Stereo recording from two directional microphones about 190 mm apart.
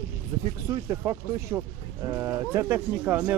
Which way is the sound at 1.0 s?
10° right (ahead or behind).